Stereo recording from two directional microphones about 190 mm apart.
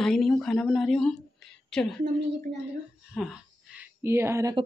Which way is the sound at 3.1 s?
5° right (ahead or behind).